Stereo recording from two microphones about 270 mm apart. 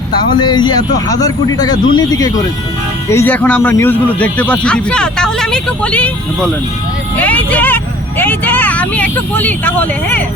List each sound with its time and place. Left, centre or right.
0.3 s a man's voice: centre
7.2 s a sound: centre
8.2 s speech: centre